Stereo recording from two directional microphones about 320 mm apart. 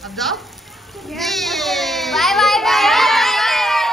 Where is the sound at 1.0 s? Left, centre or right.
Centre.